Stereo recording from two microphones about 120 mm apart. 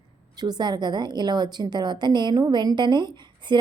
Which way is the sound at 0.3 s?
35° right (ahead or behind).